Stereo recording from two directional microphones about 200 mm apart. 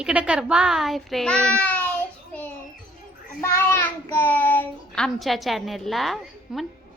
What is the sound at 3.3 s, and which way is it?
Child singing, 15° left (ahead or behind).